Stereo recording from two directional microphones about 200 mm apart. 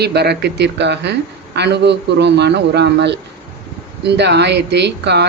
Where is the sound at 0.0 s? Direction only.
55° right (ahead or behind).